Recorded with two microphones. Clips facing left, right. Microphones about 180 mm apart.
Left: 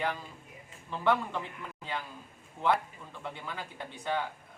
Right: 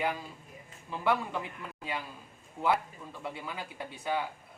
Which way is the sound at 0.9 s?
10° right (ahead or behind).